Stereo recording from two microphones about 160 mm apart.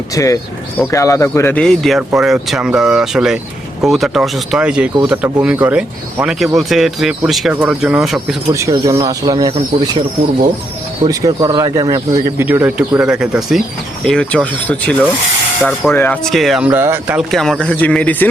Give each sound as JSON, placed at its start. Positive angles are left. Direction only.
{"t": 0.1, "sound": "speech", "side_deg": 20}
{"t": 8.7, "sound": "speech", "side_deg": -20}
{"t": 16.2, "sound": "speech", "side_deg": 0}
{"t": 17.2, "sound": "speech", "side_deg": 0}